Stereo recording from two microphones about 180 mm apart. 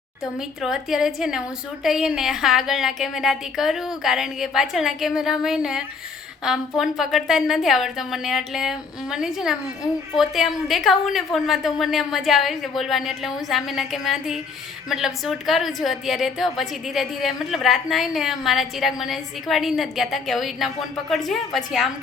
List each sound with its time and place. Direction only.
0.3 s a woman's voice: centre (ahead or behind)